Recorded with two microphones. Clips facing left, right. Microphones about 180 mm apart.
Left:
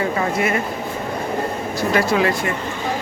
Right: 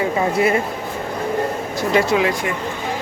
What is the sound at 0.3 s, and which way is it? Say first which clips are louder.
Speech: right 5 dB; 30° right (ahead or behind).